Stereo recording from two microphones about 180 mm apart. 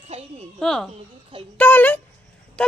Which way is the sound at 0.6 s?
5° left (ahead or behind).